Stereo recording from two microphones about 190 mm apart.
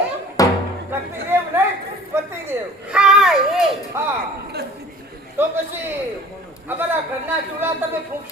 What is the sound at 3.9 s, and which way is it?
Speech, 15° right (ahead or behind).